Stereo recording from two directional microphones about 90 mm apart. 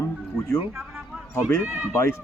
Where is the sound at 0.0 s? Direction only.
35° left (ahead or behind).